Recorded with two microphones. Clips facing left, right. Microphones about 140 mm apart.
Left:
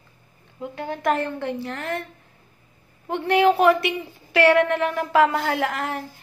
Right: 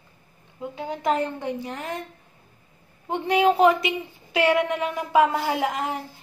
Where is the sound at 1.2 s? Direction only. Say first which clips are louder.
Left 1 dB; 15° right (ahead or behind).